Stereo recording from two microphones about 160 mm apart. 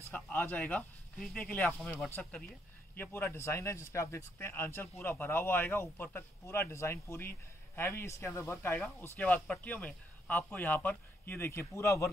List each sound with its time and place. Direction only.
0.1 s a man's voice: 10° left (ahead or behind)